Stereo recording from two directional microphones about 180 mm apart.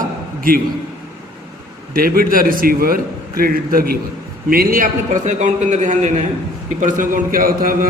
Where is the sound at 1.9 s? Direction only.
55° right (ahead or behind).